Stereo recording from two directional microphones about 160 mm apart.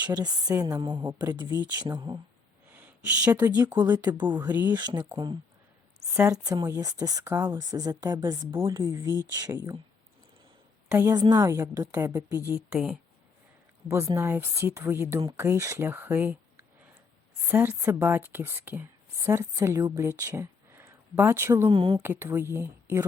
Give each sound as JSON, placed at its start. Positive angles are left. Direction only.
{"t": 0.0, "sound": "a woman's voice", "side_deg": -25}
{"t": 1.5, "sound": "speech", "side_deg": -10}
{"t": 1.8, "sound": "a woman's voice", "side_deg": -25}
{"t": 2.7, "sound": "a sound", "side_deg": -10}
{"t": 3.3, "sound": "speech", "side_deg": -10}
{"t": 3.8, "sound": "a woman's voice", "side_deg": -25}
{"t": 8.4, "sound": "a woman's voice", "side_deg": -15}
{"t": 10.8, "sound": "a woman's voice", "side_deg": -15}
{"t": 12.5, "sound": "a woman's voice", "side_deg": -5}
{"t": 13.8, "sound": "speech", "side_deg": -20}
{"t": 21.7, "sound": "speech", "side_deg": -30}
{"t": 22.0, "sound": "speech", "side_deg": -15}